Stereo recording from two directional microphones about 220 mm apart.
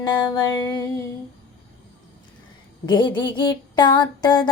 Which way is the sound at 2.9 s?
20° left (ahead or behind).